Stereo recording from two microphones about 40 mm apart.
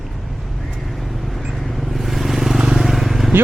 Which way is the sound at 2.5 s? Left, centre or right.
Centre.